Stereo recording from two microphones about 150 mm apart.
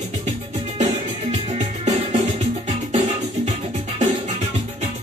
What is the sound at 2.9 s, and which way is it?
Music, 50° right (ahead or behind).